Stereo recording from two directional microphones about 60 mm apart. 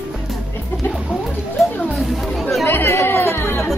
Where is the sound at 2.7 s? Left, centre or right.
Left.